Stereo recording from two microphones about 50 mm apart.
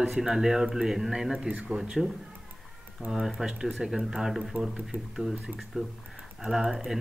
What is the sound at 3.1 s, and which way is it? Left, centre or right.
Speech, centre.